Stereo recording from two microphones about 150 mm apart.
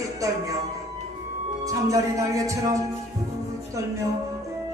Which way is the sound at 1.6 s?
20° right (ahead or behind).